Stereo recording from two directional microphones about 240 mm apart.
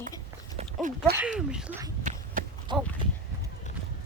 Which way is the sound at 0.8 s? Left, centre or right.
Right.